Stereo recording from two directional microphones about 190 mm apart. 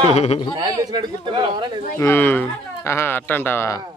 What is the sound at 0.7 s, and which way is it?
Speech, 20° right (ahead or behind).